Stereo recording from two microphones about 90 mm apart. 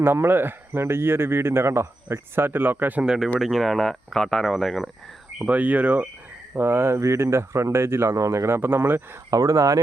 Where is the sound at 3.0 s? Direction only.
5° right (ahead or behind).